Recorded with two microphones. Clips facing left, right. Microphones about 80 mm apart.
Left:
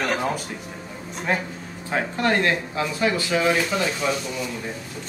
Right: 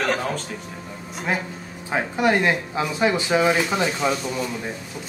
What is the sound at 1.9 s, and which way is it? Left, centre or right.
Speech, centre.